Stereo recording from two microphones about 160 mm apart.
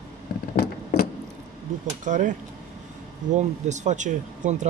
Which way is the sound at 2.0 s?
55° right (ahead or behind).